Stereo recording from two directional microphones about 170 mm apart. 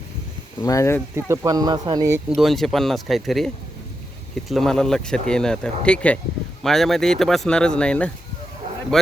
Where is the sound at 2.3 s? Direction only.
Centre (ahead or behind).